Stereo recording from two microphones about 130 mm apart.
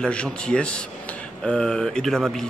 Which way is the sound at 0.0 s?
10° left (ahead or behind).